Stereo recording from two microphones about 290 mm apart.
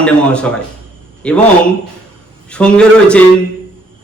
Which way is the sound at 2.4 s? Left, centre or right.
Centre.